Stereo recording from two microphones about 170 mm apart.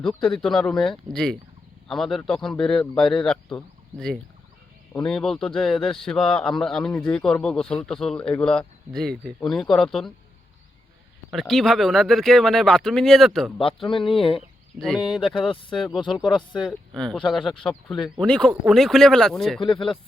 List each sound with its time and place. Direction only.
0.2 s speech: 5° left (ahead or behind)
4.9 s speech: 5° left (ahead or behind)
11.3 s speech: centre (ahead or behind)
13.8 s speech: 30° left (ahead or behind)
14.8 s speech: 5° left (ahead or behind)
15.4 s speech: 30° left (ahead or behind)
16.0 s speech: centre (ahead or behind)
19.6 s speech: 30° left (ahead or behind)